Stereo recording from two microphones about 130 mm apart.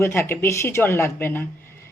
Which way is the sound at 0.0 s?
20° left (ahead or behind).